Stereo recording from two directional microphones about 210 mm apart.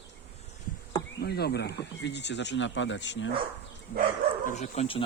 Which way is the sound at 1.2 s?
50° left (ahead or behind).